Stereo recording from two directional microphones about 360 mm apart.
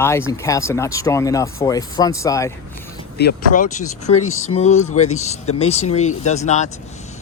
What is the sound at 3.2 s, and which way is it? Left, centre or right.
Speech, left.